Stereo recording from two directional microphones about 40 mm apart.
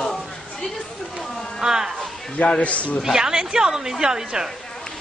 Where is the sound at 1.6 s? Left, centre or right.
Centre.